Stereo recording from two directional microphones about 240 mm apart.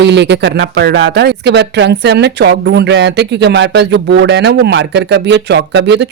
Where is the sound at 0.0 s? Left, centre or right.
Right.